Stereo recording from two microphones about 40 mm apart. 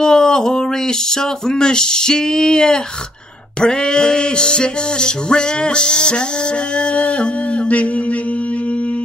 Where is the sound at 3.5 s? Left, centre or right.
Left.